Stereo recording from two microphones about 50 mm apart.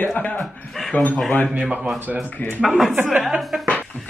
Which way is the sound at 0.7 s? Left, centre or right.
Centre.